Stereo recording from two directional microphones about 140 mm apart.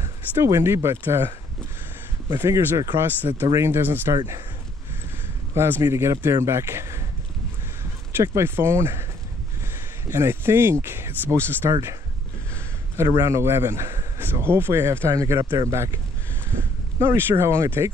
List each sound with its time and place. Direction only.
0.4 s speech: 20° right (ahead or behind)
5.5 s speech: 20° right (ahead or behind)
8.4 s speech: 15° right (ahead or behind)
10.0 s speech: 20° right (ahead or behind)
12.9 s speech: 20° right (ahead or behind)